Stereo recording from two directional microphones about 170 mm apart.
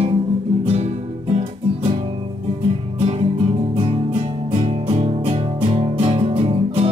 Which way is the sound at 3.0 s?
35° right (ahead or behind).